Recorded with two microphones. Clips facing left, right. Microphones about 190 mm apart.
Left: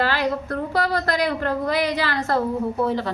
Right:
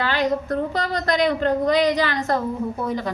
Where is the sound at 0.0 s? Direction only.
20° right (ahead or behind).